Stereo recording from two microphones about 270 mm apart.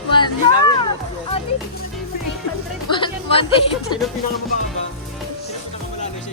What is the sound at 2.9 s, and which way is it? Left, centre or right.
Music, centre.